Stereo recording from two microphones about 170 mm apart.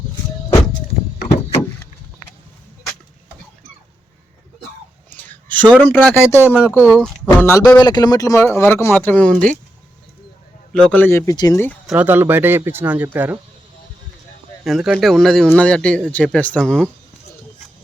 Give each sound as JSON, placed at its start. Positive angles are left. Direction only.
{"t": 5.1, "sound": "a sound", "side_deg": 10}
{"t": 5.7, "sound": "a man's voice", "side_deg": 10}
{"t": 6.8, "sound": "speech", "side_deg": 0}
{"t": 7.3, "sound": "a man's voice", "side_deg": 15}
{"t": 10.7, "sound": "a man's voice", "side_deg": 5}
{"t": 11.9, "sound": "speech", "side_deg": -10}
{"t": 14.6, "sound": "speech", "side_deg": 0}